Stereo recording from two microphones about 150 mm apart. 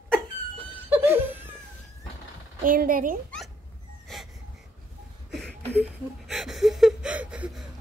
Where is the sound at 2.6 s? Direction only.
70° right (ahead or behind).